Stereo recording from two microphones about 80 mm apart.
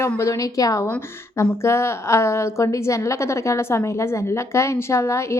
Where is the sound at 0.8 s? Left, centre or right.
Left.